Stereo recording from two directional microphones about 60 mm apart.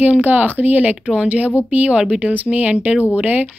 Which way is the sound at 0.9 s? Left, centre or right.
Centre.